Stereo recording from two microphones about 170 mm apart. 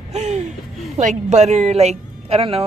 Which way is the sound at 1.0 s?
45° right (ahead or behind).